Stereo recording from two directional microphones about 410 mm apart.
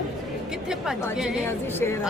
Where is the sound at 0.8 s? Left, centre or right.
Centre.